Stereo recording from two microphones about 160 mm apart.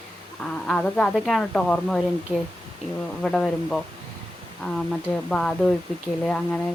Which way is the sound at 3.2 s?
Centre (ahead or behind).